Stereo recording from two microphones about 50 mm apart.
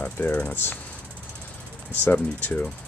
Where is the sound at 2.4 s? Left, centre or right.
Left.